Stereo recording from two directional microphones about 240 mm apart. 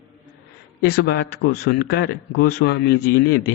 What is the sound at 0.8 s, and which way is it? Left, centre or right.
A man's voice, left.